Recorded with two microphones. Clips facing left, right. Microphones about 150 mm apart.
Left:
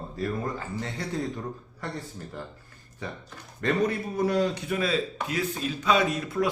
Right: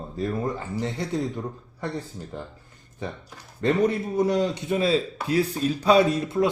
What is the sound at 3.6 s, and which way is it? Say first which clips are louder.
Speech: right 4 dB; 25° right (ahead or behind).